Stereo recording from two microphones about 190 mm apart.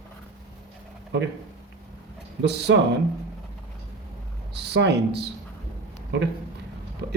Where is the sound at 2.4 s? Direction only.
65° right (ahead or behind).